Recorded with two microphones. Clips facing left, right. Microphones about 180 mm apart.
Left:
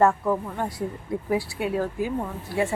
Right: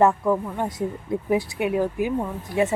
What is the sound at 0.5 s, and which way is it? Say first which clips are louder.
A woman's voice: right 3 dB; 20° right (ahead or behind).